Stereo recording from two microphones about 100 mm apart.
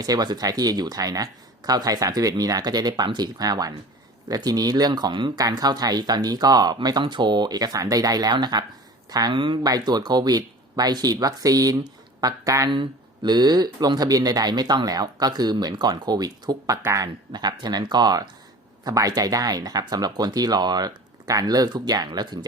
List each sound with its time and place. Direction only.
0.0 s speech: 40° right (ahead or behind)
9.3 s speech: 55° right (ahead or behind)
9.6 s speech: 40° right (ahead or behind)
12.7 s speech: 50° right (ahead or behind); by 17.1 s 30° right (ahead or behind)
17.3 s speech: 45° right (ahead or behind)